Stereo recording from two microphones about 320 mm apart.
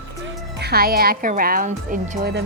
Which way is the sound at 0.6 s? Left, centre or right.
Right.